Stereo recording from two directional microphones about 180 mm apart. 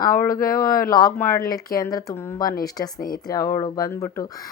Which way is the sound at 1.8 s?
20° left (ahead or behind).